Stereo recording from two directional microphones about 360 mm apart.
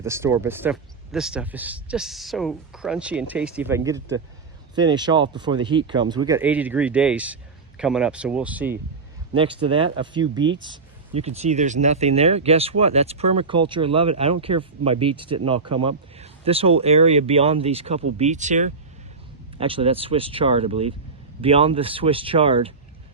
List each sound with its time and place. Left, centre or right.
0.0 s speech: centre